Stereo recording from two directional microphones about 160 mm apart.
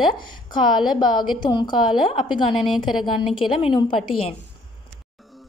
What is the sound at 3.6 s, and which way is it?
Speech, 30° left (ahead or behind).